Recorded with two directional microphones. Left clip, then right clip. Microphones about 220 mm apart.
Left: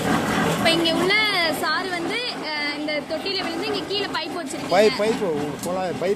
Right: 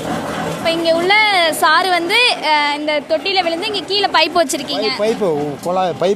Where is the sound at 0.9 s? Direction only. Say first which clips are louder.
Right 7 dB; 40° right (ahead or behind).